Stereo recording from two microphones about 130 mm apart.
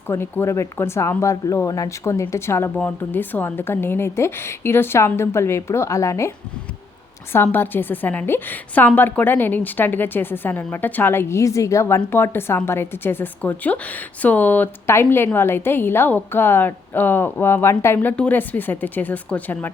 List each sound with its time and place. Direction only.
0.1 s speech: 20° left (ahead or behind)
7.3 s a woman's voice: 15° left (ahead or behind)